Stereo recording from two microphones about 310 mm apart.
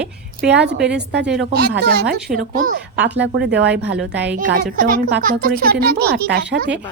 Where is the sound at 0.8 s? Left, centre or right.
Centre.